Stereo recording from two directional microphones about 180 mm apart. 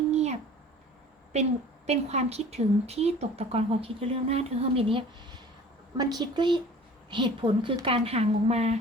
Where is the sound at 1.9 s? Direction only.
35° right (ahead or behind).